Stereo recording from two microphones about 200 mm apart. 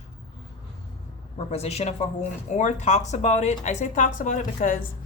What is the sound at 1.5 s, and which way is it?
Speech, 30° left (ahead or behind).